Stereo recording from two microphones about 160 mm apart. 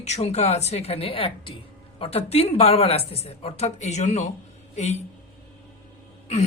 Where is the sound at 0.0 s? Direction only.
40° left (ahead or behind).